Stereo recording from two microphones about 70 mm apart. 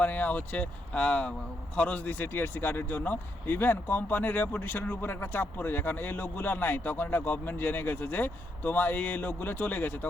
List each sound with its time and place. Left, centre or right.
0.0 s speech: left